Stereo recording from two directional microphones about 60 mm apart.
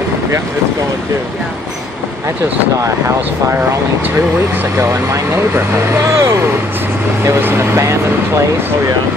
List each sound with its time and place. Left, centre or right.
5.9 s speech: right
7.7 s speech: right